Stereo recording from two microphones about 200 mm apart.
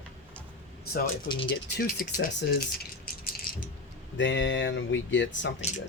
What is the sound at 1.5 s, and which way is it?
Speech, 50° left (ahead or behind).